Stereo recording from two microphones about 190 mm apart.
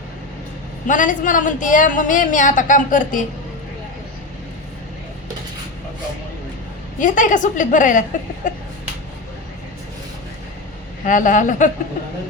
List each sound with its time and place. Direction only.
0.9 s a woman's voice: 40° left (ahead or behind)
7.0 s a woman's voice: 40° left (ahead or behind)
8.4 s a sound: 40° left (ahead or behind)
11.0 s a woman's voice: 45° left (ahead or behind)